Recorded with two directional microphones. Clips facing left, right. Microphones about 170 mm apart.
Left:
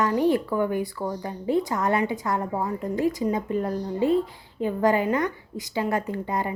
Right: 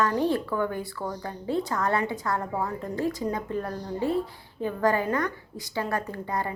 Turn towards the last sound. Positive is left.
turn(degrees=20)  # may be behind; listen again after turning